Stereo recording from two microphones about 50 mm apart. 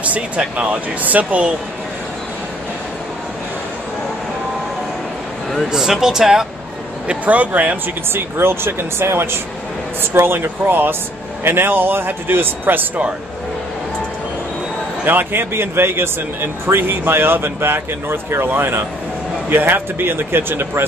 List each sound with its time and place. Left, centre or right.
0.0 s speech: right
5.7 s speech: centre
7.1 s speech: right
8.1 s speech: right
15.0 s a man's voice: right
15.5 s speech: right